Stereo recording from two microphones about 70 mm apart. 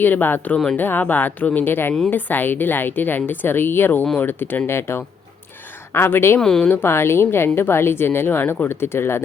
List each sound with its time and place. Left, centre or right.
0.0 s a woman's voice: left
0.5 s speech: centre
0.8 s a woman's voice: left
6.4 s speech: centre
6.7 s a woman's voice: left